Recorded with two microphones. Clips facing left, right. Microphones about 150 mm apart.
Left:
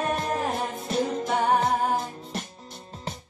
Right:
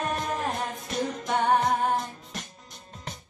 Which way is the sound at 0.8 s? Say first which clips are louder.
Left 6 dB; 30° left (ahead or behind).